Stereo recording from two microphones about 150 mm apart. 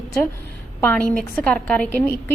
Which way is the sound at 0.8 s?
10° left (ahead or behind).